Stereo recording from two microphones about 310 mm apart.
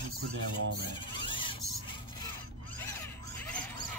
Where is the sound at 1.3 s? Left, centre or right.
Centre.